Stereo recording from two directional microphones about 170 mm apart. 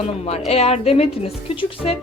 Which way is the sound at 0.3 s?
40° left (ahead or behind).